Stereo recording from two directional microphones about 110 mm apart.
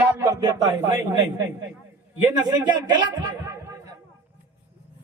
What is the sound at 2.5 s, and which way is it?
Speech, 40° right (ahead or behind).